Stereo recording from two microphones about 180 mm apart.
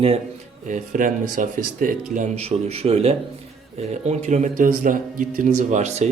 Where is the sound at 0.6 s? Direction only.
45° right (ahead or behind).